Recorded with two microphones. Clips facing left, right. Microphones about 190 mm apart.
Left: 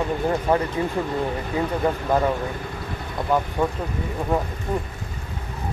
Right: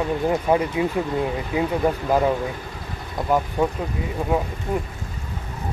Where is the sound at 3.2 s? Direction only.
5° right (ahead or behind).